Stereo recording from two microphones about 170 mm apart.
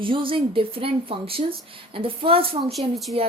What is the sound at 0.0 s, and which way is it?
A woman's voice, 30° right (ahead or behind).